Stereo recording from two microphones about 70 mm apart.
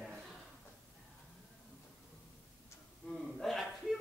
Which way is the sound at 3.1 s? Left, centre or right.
Centre.